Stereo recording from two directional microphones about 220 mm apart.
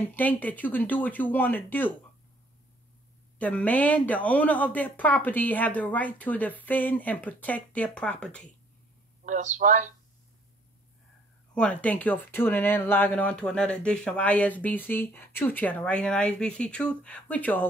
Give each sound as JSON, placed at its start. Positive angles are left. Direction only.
{"t": 0.0, "sound": "speech", "side_deg": 10}
{"t": 3.3, "sound": "speech", "side_deg": 5}
{"t": 9.2, "sound": "speech", "side_deg": -35}
{"t": 11.5, "sound": "speech", "side_deg": 5}